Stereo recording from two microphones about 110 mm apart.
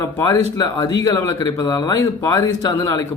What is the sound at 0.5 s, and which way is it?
Speech, 35° left (ahead or behind).